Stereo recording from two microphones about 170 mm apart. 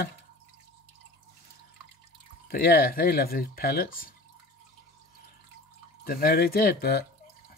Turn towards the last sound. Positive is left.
turn(degrees=65)  # may be behind; listen again after turning